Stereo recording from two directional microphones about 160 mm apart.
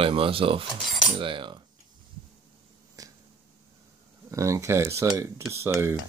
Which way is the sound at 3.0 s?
20° right (ahead or behind).